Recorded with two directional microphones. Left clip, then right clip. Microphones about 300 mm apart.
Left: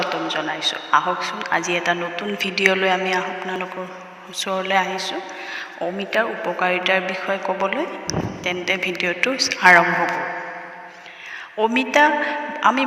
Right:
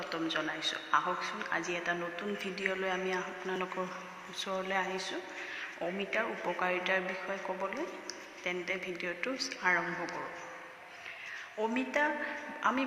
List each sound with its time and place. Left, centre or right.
0.0 s a man's voice: left
11.6 s a woman's voice: left